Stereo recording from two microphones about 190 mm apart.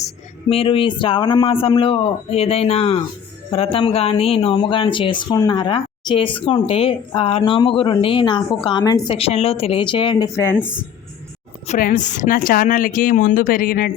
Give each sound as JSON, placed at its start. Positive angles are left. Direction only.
{"t": 0.5, "sound": "speech", "side_deg": 30}
{"t": 10.3, "sound": "a woman's voice", "side_deg": 15}
{"t": 11.7, "sound": "a woman's voice", "side_deg": 45}